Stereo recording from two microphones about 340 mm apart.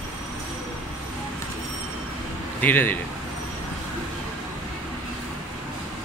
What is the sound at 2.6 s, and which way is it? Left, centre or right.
Speech, centre.